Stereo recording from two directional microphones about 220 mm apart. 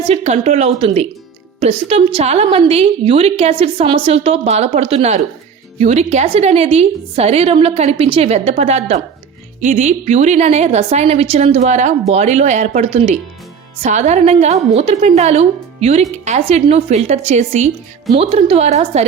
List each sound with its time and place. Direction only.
0.1 s a woman's voice: 30° right (ahead or behind)